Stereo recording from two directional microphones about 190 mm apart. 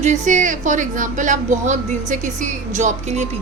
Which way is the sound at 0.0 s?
40° right (ahead or behind).